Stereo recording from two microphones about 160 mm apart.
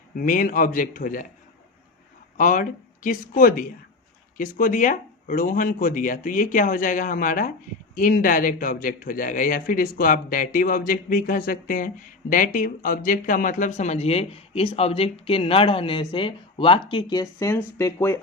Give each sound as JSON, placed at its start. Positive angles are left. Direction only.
{"t": 0.2, "sound": "speech", "side_deg": 60}
{"t": 2.4, "sound": "speech", "side_deg": 55}